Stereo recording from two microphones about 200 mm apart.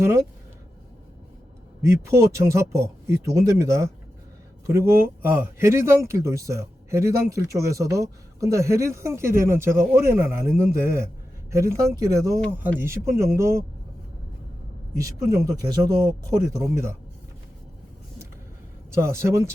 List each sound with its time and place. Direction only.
0.0 s speech: 15° right (ahead or behind)
1.8 s speech: 15° right (ahead or behind)
14.9 s speech: 15° right (ahead or behind)
18.9 s speech: 15° right (ahead or behind)